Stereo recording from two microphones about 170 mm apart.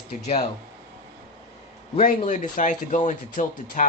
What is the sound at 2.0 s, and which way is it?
Speech, 50° left (ahead or behind).